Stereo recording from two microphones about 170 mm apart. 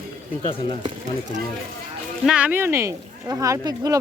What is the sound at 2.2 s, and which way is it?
Speech, 5° right (ahead or behind).